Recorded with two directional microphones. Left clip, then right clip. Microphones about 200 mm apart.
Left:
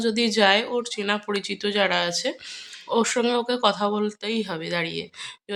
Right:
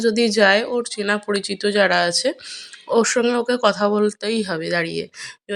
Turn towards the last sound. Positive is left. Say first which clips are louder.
# right 4 dB
turn(degrees=-25)  # may be behind; listen again after turning